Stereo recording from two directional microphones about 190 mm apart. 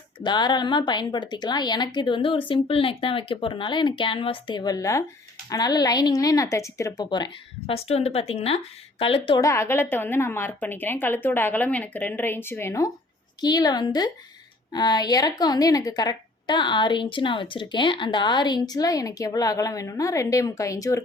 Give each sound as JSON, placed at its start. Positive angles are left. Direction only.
{"t": 0.2, "sound": "a woman's voice", "side_deg": 20}
{"t": 7.7, "sound": "a woman's voice", "side_deg": 35}